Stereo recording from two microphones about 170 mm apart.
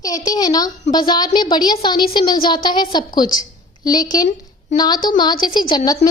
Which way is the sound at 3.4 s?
20° left (ahead or behind).